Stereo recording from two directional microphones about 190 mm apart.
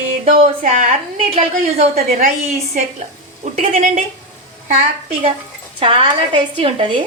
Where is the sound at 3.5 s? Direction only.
35° right (ahead or behind).